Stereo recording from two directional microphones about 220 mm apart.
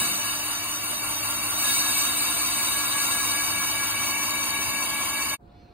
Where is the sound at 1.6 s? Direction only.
10° right (ahead or behind).